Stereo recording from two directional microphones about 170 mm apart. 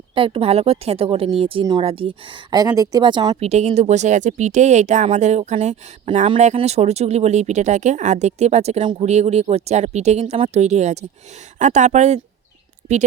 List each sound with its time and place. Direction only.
0.1 s speech: 30° right (ahead or behind)